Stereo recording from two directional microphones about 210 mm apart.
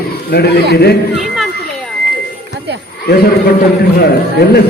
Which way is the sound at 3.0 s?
50° left (ahead or behind).